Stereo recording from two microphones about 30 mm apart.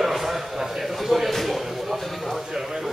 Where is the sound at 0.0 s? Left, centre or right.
Centre.